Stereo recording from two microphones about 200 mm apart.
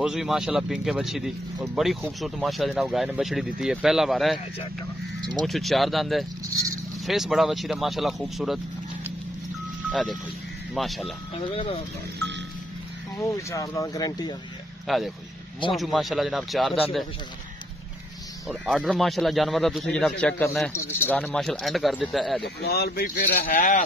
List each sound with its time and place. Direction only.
0.0 s speech: centre (ahead or behind)
5.4 s speech: centre (ahead or behind)
9.8 s speech: centre (ahead or behind)
11.3 s speech: 30° left (ahead or behind)
12.2 s sheep: 60° right (ahead or behind)
13.3 s speech: 15° left (ahead or behind)
14.9 s speech: centre (ahead or behind)
18.5 s speech: centre (ahead or behind)
22.4 s speech: 55° left (ahead or behind)